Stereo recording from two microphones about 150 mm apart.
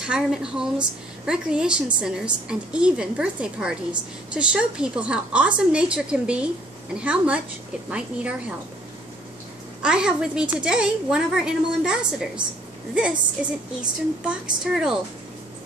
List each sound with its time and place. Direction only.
0.0 s a woman's voice: 5° right (ahead or behind)
9.8 s a woman's voice: 5° right (ahead or behind)